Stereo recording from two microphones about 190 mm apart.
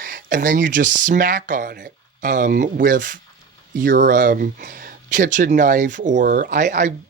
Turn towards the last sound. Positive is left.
turn(degrees=-40)  # may be behind; listen again after turning